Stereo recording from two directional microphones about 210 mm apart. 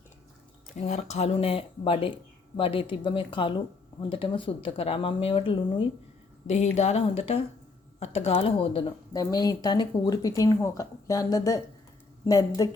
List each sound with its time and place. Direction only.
0.8 s speech: 30° left (ahead or behind); by 12.5 s 15° left (ahead or behind)